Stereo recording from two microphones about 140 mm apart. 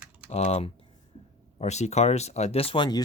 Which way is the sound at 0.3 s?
50° left (ahead or behind).